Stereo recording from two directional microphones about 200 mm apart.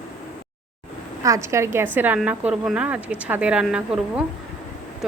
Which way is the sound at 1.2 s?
15° right (ahead or behind).